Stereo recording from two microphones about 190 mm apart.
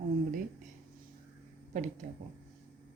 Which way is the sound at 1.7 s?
40° right (ahead or behind).